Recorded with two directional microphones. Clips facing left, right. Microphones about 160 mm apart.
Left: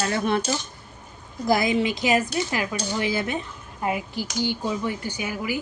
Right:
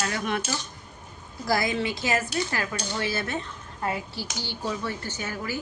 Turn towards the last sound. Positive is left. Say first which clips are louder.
# left 4 dB
turn(degrees=10)  # may be behind; listen again after turning